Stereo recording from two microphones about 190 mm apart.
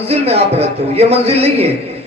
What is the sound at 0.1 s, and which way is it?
Speech, 35° right (ahead or behind).